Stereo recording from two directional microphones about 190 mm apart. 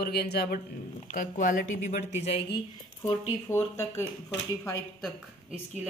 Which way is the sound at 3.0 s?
15° left (ahead or behind).